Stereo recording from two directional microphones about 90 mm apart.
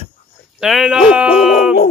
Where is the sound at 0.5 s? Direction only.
5° right (ahead or behind).